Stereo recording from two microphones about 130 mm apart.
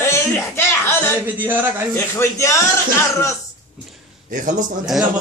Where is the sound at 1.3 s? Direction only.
15° right (ahead or behind).